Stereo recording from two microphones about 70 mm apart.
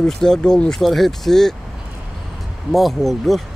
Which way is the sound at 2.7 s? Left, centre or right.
Centre.